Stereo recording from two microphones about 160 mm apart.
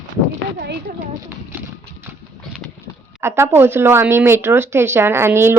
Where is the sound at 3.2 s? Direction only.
15° right (ahead or behind).